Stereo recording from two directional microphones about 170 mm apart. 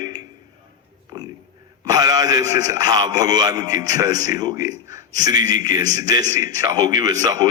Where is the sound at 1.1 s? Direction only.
25° right (ahead or behind).